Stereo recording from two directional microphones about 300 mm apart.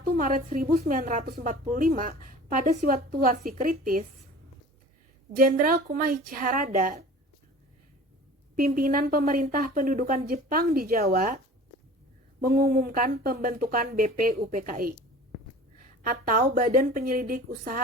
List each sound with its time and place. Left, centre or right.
0.0 s a woman's voice: right
5.3 s a woman's voice: right
8.5 s a woman's voice: right
12.4 s a woman's voice: right
16.0 s a woman's voice: right